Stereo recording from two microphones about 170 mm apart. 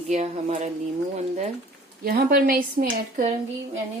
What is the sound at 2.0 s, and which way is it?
A woman's voice, 60° right (ahead or behind).